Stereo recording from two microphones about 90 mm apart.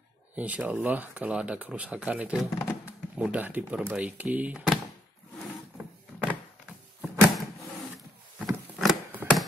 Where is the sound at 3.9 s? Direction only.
15° right (ahead or behind).